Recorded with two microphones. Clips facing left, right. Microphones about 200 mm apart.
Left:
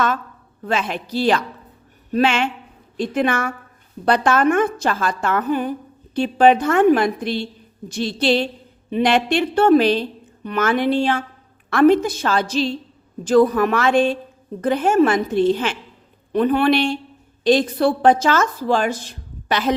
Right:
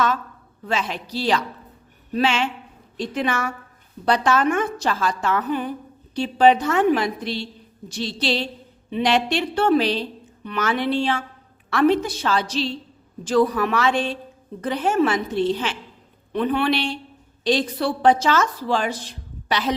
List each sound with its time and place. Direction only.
0.6 s a woman's voice: 55° left (ahead or behind)